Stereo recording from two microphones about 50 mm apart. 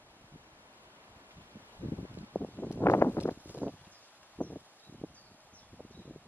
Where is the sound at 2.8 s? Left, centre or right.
Left.